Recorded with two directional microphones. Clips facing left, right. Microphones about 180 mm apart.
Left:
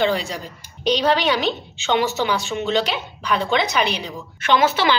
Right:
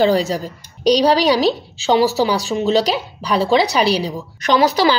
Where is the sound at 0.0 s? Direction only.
40° right (ahead or behind).